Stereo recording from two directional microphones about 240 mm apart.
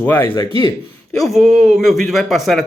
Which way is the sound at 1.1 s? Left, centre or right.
Centre.